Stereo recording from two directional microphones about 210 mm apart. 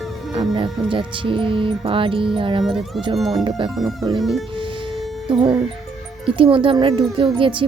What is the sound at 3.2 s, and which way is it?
Speech, 20° right (ahead or behind).